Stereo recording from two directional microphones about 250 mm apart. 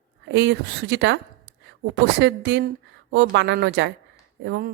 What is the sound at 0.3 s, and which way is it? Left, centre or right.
A woman's voice, right.